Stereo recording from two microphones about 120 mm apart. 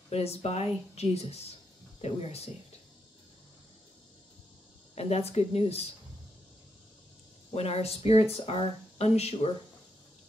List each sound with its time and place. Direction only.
0.1 s speech: 60° left (ahead or behind)
4.9 s speech: 60° left (ahead or behind)
7.5 s speech: 60° left (ahead or behind)